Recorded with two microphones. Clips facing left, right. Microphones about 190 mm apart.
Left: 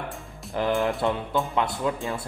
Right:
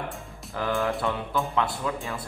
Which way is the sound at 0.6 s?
15° left (ahead or behind).